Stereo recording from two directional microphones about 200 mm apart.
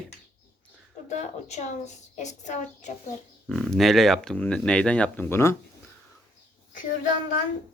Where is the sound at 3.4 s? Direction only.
Centre (ahead or behind).